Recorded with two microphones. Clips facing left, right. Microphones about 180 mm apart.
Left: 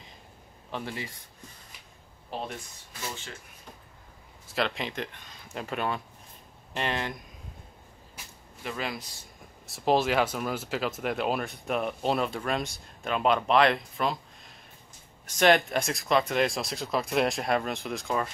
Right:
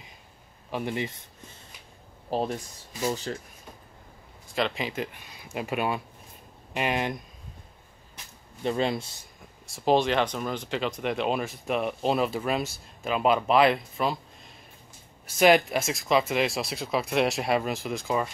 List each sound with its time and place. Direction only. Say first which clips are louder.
0.7 s speech: right 6 dB; 15° right (ahead or behind)
2.3 s speech: right 8 dB; 40° right (ahead or behind)
4.5 s speech: right 2 dB; centre (ahead or behind); by 7.2 s 15° right (ahead or behind)
8.6 s speech: right 8 dB; 30° right (ahead or behind)
9.7 s speech: right 2 dB; centre (ahead or behind)